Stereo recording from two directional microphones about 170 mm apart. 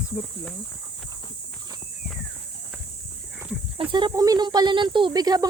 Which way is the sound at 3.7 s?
25° right (ahead or behind).